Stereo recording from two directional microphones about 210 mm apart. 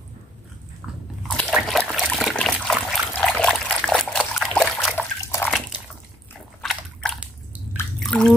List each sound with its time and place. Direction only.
1.3 s trickle: centre (ahead or behind)
5.2 s bathtub: 15° left (ahead or behind)
6.6 s a sound: centre (ahead or behind)
8.0 s bathtub: 5° left (ahead or behind)